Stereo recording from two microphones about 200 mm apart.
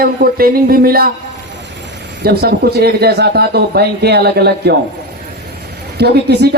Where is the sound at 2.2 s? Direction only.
55° right (ahead or behind).